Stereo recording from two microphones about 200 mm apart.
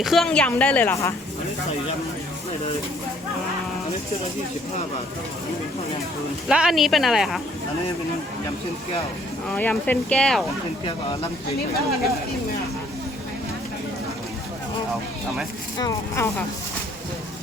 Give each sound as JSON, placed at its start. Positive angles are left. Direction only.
{"t": 0.0, "sound": "a woman's voice", "side_deg": 0}
{"t": 6.5, "sound": "speech", "side_deg": 0}
{"t": 9.5, "sound": "a woman's voice", "side_deg": 10}
{"t": 10.8, "sound": "speech", "side_deg": 25}
{"t": 15.8, "sound": "a woman's voice", "side_deg": 15}